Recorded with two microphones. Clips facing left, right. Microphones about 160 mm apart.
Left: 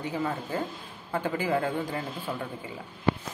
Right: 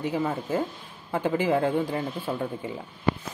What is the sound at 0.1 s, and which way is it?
A man's voice, 15° right (ahead or behind).